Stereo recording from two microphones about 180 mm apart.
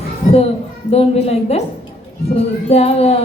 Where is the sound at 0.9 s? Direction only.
35° left (ahead or behind).